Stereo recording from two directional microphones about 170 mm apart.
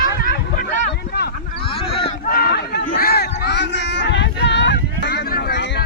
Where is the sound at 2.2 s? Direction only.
65° left (ahead or behind).